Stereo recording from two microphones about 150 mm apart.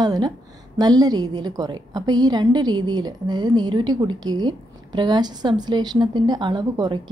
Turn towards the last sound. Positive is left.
turn(degrees=-30)  # may be behind; listen again after turning